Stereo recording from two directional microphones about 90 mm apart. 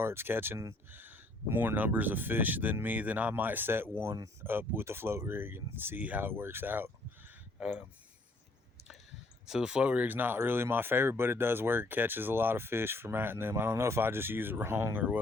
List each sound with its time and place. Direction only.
0.0 s speech: 25° right (ahead or behind)
7.6 s speech: 10° right (ahead or behind)
9.5 s speech: 10° right (ahead or behind); by 15.0 s 25° right (ahead or behind)